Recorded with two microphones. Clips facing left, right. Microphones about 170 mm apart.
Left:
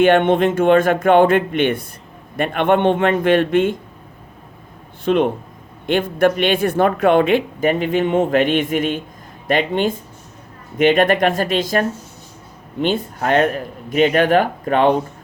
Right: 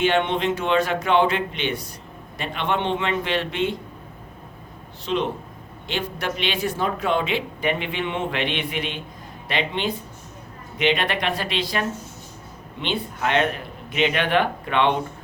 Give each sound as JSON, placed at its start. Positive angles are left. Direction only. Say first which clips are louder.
{"t": 0.0, "sound": "speech", "louder": "left 8 dB", "side_deg": 50}
{"t": 5.0, "sound": "speech", "louder": "left 8 dB", "side_deg": 55}